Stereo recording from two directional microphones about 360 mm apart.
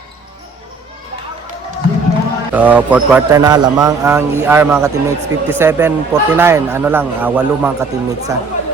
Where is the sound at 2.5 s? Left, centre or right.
Centre.